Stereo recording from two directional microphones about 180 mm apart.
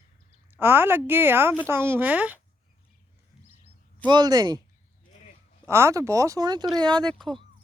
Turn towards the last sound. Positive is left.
turn(degrees=0)  # may be behind; listen again after turning